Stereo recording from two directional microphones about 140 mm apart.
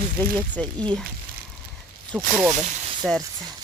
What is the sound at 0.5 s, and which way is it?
Speech, 10° left (ahead or behind).